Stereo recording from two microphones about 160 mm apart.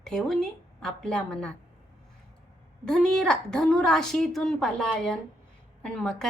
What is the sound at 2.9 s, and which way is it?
A woman's voice, 5° left (ahead or behind).